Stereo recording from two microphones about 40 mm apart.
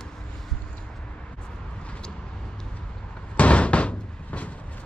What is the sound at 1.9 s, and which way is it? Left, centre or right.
Vehicle, left.